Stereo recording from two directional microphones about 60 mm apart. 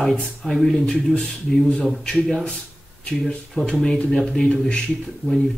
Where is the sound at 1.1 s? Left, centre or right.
Centre.